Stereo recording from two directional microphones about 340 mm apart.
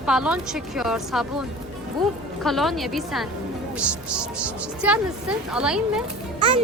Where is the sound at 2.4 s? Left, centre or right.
Centre.